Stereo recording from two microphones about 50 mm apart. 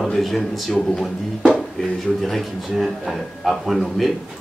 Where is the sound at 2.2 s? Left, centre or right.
Centre.